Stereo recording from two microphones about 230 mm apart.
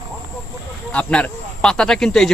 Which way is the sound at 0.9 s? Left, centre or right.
Centre.